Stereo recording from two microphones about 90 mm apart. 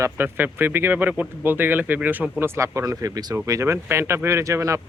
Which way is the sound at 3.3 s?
30° right (ahead or behind).